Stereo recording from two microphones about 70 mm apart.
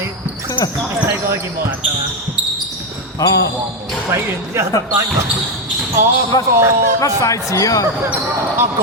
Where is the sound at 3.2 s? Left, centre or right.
Left.